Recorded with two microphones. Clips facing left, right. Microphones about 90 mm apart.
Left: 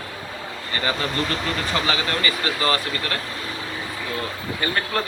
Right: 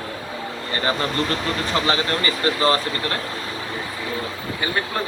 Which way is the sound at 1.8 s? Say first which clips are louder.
Right 2 dB; 35° right (ahead or behind).